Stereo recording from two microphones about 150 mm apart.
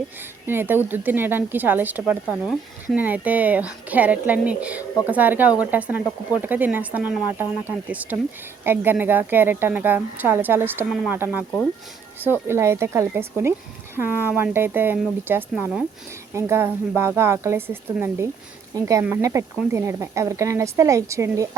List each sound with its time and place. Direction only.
0.4 s speech: 15° right (ahead or behind)